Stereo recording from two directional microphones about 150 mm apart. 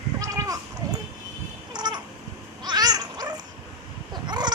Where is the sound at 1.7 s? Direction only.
30° right (ahead or behind).